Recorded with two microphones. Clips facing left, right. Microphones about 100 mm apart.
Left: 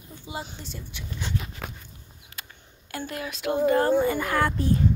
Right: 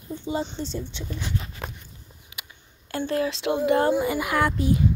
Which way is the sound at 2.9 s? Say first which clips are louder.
Right 8 dB; 30° right (ahead or behind).